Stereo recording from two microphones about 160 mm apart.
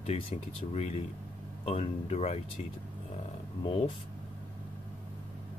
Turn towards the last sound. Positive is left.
turn(degrees=35)  # may be behind; listen again after turning